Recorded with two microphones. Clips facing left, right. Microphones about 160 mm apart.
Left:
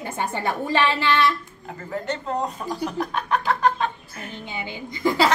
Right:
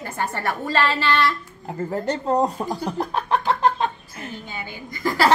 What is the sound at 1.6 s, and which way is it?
Speech, 35° right (ahead or behind).